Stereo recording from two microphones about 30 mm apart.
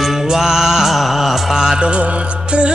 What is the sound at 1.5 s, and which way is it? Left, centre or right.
Music, centre.